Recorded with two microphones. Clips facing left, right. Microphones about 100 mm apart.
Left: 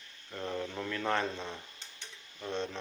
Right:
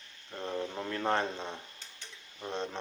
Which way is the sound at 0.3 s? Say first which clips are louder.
Right 1 dB; 20° right (ahead or behind).